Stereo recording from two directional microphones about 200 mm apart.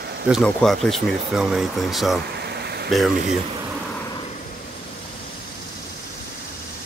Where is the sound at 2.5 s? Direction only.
55° right (ahead or behind).